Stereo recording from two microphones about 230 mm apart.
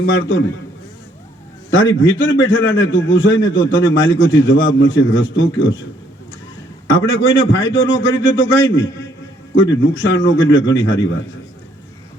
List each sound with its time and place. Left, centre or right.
0.0 s a man's voice: left
1.7 s a man's voice: left
6.8 s a man's voice: left